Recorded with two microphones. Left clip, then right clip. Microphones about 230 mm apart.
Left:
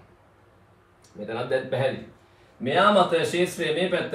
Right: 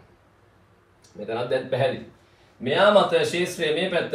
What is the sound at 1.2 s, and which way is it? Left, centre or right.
A man's voice, centre.